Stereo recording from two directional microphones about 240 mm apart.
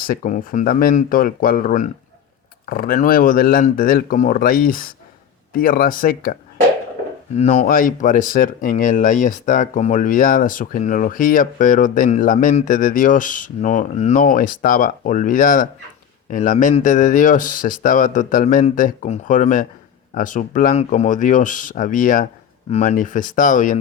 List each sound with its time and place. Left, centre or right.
0.1 s speech: left
7.3 s speech: left